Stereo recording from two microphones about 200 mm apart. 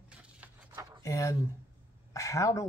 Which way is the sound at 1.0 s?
15° left (ahead or behind).